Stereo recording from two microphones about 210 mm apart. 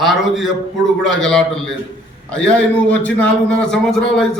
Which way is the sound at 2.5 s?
5° left (ahead or behind).